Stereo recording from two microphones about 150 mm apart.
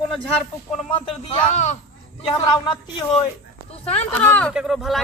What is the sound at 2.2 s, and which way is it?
Speech, 30° left (ahead or behind).